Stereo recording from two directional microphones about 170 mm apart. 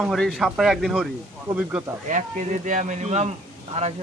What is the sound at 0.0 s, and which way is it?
Speech, centre (ahead or behind).